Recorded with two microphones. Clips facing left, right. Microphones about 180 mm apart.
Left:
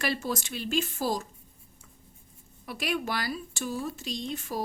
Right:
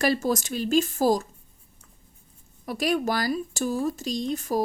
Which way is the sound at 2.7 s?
40° right (ahead or behind).